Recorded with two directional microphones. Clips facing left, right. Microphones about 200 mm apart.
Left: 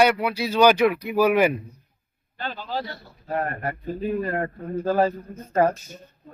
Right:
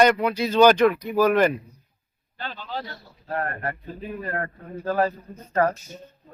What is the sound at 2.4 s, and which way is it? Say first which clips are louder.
Speech: left 3 dB; 45° left (ahead or behind).